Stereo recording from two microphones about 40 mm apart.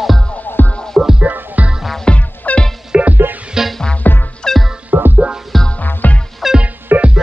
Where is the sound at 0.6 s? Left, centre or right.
Left.